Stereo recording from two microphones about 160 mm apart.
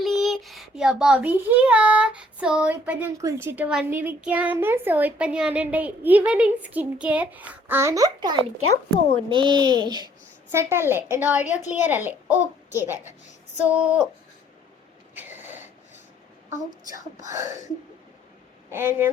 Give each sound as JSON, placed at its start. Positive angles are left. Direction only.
{"t": 0.0, "sound": "a child's voice", "side_deg": 0}
{"t": 10.5, "sound": "speech", "side_deg": -15}
{"t": 15.1, "sound": "a sound", "side_deg": -10}
{"t": 17.2, "sound": "a child's voice", "side_deg": -20}
{"t": 18.7, "sound": "speech", "side_deg": -15}